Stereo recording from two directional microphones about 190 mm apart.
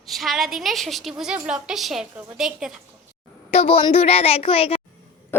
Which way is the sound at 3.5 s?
30° left (ahead or behind).